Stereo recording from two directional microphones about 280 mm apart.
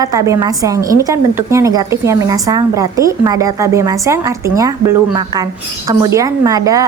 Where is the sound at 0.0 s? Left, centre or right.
Centre.